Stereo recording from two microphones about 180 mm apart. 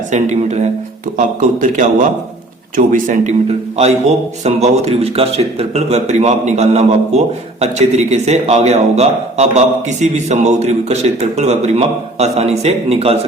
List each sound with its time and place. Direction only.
0.1 s a man's voice: 40° right (ahead or behind)